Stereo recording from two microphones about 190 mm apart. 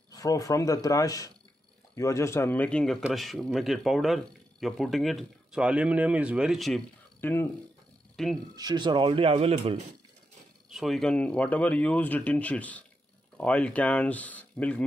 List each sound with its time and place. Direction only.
0.1 s speech: 20° left (ahead or behind); by 6.8 s centre (ahead or behind)
7.2 s speech: 10° left (ahead or behind)
8.5 s speech: 20° right (ahead or behind)
10.7 s speech: centre (ahead or behind)